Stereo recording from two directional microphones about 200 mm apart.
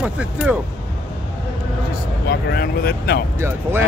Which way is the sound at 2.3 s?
55° left (ahead or behind).